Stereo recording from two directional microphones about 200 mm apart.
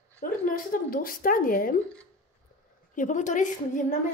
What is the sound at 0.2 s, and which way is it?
Speech, 45° left (ahead or behind).